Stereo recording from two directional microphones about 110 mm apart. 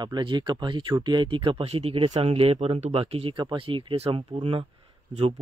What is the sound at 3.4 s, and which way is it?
Speech, 50° right (ahead or behind).